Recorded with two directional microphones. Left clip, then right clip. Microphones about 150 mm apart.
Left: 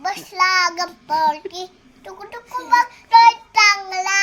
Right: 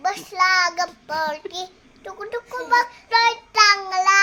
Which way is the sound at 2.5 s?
25° right (ahead or behind).